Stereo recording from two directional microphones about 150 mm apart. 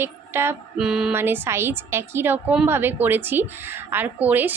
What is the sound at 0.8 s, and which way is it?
Speech, 5° right (ahead or behind).